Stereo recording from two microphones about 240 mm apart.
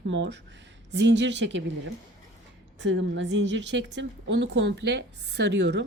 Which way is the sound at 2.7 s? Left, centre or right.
Right.